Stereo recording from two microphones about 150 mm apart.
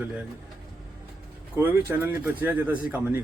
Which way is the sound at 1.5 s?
15° right (ahead or behind).